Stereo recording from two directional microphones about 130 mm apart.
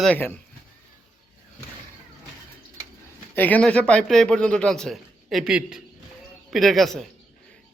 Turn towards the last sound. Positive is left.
turn(degrees=0)  # may be behind; listen again after turning